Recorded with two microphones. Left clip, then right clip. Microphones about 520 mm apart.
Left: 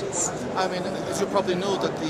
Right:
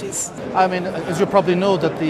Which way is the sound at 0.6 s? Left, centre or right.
Right.